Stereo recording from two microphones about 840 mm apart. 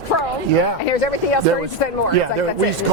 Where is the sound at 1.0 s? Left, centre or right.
Left.